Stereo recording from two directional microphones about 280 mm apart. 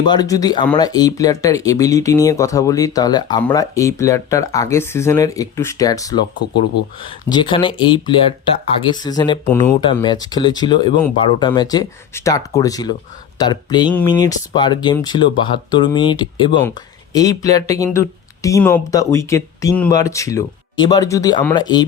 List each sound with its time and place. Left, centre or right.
0.1 s speech: centre